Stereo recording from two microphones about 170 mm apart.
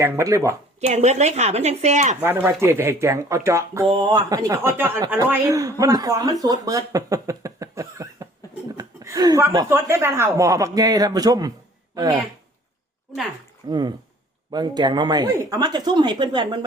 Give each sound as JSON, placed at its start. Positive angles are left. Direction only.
{"t": 0.0, "sound": "speech", "side_deg": -20}
{"t": 0.8, "sound": "speech", "side_deg": -40}
{"t": 2.2, "sound": "speech", "side_deg": -15}
{"t": 13.7, "sound": "speech", "side_deg": -25}